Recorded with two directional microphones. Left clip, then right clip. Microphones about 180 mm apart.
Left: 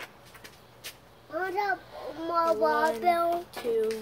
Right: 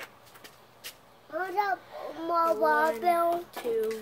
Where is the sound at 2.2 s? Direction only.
30° right (ahead or behind).